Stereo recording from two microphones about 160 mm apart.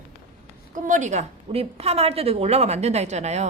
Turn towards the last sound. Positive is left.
turn(degrees=-45)  # may be behind; listen again after turning